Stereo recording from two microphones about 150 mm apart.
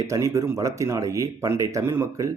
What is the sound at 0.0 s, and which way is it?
Speech, 20° right (ahead or behind).